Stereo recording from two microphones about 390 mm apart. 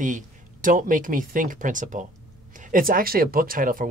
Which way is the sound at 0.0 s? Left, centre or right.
Centre.